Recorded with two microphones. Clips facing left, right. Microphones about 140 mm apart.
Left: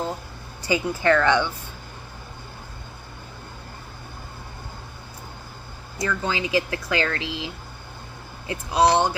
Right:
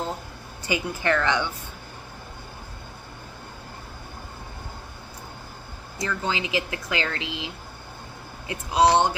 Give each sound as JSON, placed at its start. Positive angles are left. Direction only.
{"t": 0.7, "sound": "a woman's voice", "side_deg": -15}
{"t": 6.0, "sound": "speech", "side_deg": -25}